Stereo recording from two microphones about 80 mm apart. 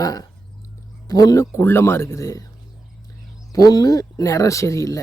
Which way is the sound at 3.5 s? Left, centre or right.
Left.